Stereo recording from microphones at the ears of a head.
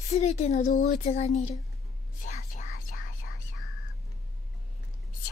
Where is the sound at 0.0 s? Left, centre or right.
Left.